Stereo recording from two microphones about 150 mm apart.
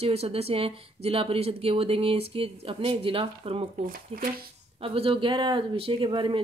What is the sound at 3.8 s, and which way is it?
Speech, 65° right (ahead or behind).